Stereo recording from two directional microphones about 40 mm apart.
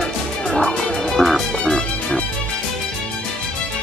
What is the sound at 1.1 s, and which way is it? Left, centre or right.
Music, centre.